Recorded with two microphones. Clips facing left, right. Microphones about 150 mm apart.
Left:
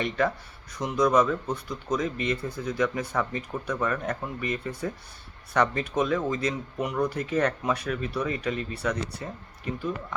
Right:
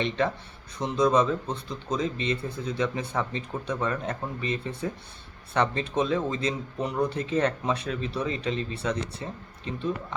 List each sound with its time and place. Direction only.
0.0 s speech: 25° right (ahead or behind)